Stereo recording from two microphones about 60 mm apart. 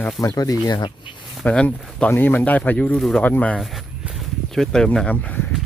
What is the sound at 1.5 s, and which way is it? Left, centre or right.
Speech, left.